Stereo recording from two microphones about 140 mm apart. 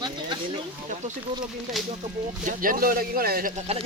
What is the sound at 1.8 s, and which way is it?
Speech, centre (ahead or behind).